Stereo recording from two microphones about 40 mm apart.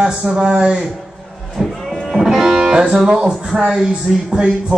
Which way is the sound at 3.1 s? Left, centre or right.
Right.